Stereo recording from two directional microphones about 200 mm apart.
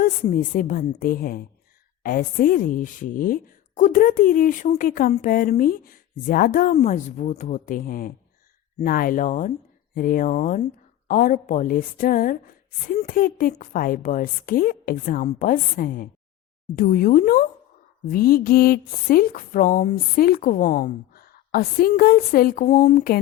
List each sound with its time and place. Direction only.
0.0 s speech: 40° left (ahead or behind)